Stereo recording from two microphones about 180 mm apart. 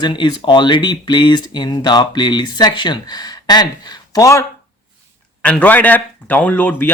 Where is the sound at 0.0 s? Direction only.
25° left (ahead or behind).